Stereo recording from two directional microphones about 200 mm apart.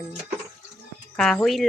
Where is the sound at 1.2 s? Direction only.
Centre (ahead or behind).